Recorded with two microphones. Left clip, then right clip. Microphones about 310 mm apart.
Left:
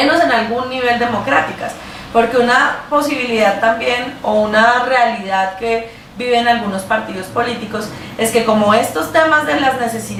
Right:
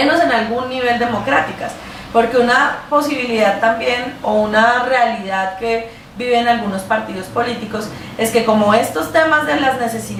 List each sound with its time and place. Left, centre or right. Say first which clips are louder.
0.0 s a woman's voice: left 1 dB; centre
4.3 s a sound: left 1 dB; centre
4.5 s a woman's voice: left 2 dB; centre